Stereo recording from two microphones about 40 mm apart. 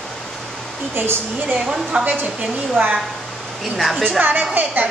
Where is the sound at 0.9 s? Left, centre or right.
Right.